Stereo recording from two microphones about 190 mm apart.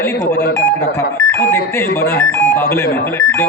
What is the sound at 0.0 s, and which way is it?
Speech, 15° left (ahead or behind).